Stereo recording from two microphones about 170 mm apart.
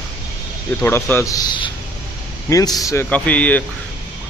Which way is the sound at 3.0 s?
10° left (ahead or behind).